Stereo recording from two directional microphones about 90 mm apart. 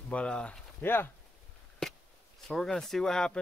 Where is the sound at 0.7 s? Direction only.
25° left (ahead or behind).